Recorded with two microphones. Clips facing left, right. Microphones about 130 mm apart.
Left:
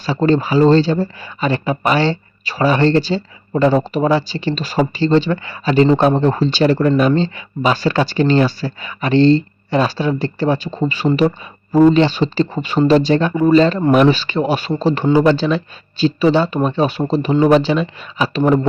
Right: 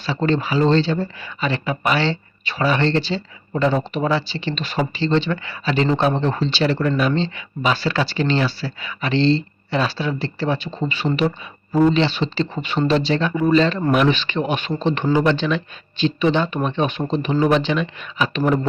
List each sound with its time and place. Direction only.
0.0 s speech: 40° left (ahead or behind)